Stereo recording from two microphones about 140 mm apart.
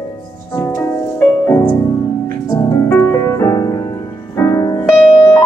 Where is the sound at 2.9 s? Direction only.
20° left (ahead or behind).